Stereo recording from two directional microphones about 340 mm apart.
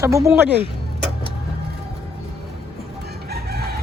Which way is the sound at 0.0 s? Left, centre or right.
Centre.